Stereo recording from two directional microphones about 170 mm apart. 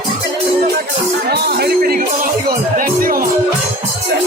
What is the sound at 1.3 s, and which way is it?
Music, 70° right (ahead or behind).